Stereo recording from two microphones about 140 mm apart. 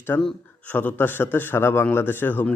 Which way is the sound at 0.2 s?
10° left (ahead or behind).